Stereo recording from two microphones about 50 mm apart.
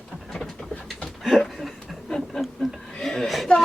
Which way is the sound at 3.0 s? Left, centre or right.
Centre.